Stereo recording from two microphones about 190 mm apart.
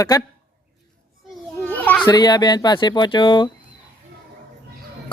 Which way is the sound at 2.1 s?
20° left (ahead or behind).